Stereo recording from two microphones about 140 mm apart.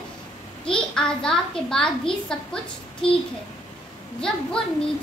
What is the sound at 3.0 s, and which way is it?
Speech, 40° left (ahead or behind).